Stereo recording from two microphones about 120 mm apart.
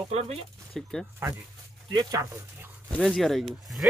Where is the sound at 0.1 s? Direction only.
60° right (ahead or behind).